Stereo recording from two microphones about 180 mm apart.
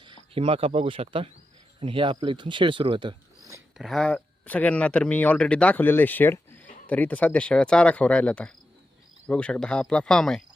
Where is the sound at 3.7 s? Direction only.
Centre (ahead or behind).